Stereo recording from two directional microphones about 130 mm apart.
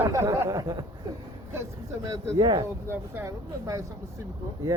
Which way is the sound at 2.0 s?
35° right (ahead or behind).